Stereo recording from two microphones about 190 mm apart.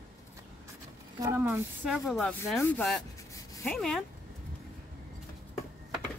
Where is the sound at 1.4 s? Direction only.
5° right (ahead or behind).